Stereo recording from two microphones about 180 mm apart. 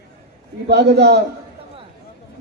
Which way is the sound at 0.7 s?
65° right (ahead or behind).